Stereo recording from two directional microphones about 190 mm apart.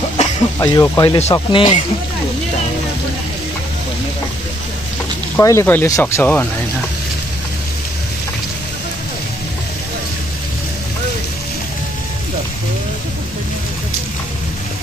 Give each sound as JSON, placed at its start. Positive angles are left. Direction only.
{"t": 0.6, "sound": "speech", "side_deg": 20}
{"t": 5.3, "sound": "speech", "side_deg": 15}